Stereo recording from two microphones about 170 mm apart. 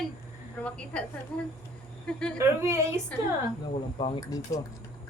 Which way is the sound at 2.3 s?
15° right (ahead or behind).